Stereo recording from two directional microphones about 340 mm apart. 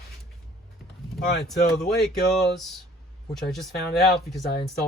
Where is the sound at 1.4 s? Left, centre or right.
Centre.